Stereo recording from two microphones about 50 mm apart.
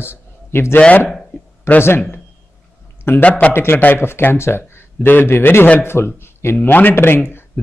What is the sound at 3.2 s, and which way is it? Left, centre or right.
Speech, left.